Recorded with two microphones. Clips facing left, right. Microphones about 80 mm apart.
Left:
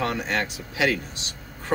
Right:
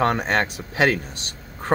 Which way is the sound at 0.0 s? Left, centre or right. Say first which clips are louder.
Right 5 dB; right.